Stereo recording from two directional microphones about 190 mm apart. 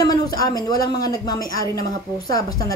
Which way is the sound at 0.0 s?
20° left (ahead or behind).